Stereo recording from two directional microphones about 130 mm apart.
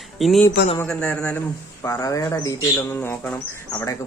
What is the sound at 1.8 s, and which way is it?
Speech, 25° left (ahead or behind).